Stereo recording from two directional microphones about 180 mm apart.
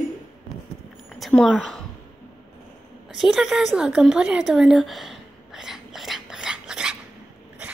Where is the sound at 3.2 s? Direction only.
Centre (ahead or behind).